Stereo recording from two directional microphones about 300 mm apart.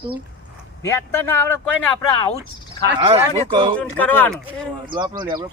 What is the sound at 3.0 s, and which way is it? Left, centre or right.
Speech, centre.